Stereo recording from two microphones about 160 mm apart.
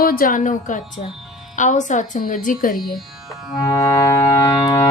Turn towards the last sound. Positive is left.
turn(degrees=20)  # may be behind; listen again after turning